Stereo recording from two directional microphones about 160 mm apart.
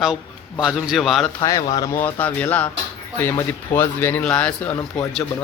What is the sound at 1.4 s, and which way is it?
Speech, 20° left (ahead or behind).